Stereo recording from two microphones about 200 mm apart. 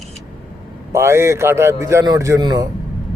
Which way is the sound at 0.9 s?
15° right (ahead or behind).